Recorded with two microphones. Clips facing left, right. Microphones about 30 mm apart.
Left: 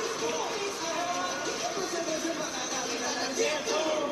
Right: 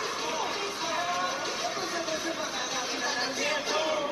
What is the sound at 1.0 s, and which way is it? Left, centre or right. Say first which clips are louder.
Music: right 2 dB; right.